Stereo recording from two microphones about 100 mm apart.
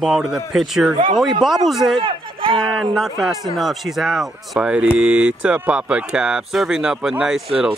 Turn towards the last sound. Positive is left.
turn(degrees=-5)  # may be behind; listen again after turning